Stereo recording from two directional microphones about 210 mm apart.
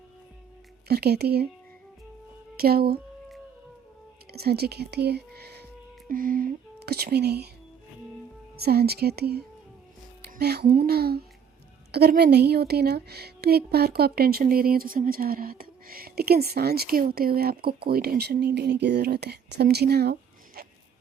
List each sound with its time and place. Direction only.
0.9 s speech: 50° right (ahead or behind)
2.6 s speech: 45° right (ahead or behind)
4.3 s speech: 50° right (ahead or behind)
8.5 s speech: 50° right (ahead or behind)